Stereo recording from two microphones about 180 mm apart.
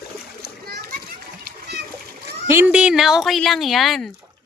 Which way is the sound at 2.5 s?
10° right (ahead or behind).